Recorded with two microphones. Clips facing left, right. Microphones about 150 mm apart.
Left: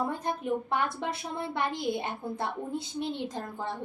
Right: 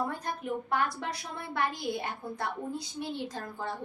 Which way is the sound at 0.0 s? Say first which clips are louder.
Left 3 dB; 20° left (ahead or behind).